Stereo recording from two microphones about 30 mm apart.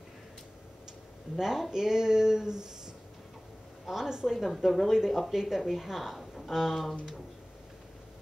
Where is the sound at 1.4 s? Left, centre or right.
Centre.